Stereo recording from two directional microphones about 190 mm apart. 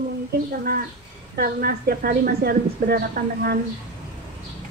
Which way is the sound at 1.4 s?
55° right (ahead or behind).